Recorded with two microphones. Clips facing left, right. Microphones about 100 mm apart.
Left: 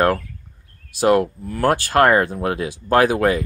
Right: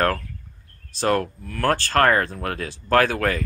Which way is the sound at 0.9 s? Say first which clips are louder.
Left 6 dB; 15° left (ahead or behind).